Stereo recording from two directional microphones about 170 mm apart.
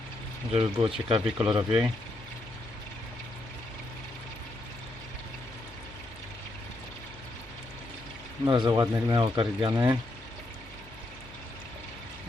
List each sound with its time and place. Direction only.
0.5 s speech: 30° right (ahead or behind)
8.4 s speech: 25° right (ahead or behind)
9.7 s speech: 15° right (ahead or behind)